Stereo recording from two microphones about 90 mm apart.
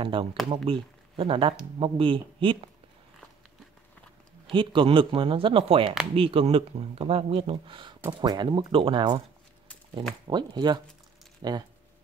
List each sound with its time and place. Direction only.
0.0 s speech: 70° right (ahead or behind)
4.5 s speech: 70° right (ahead or behind); by 7.5 s 90° right
7.5 s speech: 70° right (ahead or behind)
8.2 s speech: 55° right (ahead or behind)
10.2 s speech: 55° right (ahead or behind)